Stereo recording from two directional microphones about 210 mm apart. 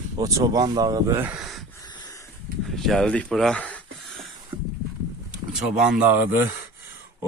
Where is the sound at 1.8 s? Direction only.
20° left (ahead or behind).